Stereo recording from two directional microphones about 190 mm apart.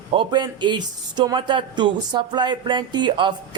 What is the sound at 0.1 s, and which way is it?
A man's voice, 25° right (ahead or behind).